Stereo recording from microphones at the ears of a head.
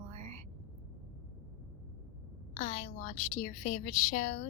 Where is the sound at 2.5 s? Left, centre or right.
Left.